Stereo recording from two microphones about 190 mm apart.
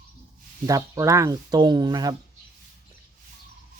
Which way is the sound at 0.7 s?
15° right (ahead or behind).